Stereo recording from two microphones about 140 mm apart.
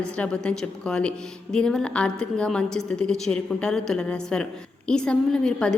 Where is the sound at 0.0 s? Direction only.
5° left (ahead or behind).